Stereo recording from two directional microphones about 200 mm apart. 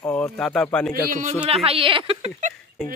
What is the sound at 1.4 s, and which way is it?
Speech, 30° right (ahead or behind).